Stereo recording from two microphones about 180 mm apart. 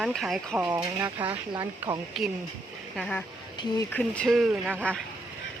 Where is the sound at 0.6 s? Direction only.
15° right (ahead or behind).